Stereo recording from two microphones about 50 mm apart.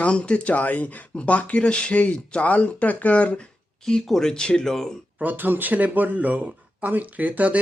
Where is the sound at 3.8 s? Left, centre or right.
Centre.